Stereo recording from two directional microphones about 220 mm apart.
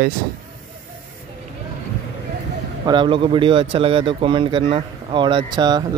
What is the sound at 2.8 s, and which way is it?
Speech, 20° right (ahead or behind).